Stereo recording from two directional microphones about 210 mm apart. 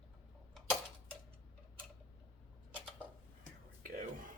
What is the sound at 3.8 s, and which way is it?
Whispering, 40° right (ahead or behind).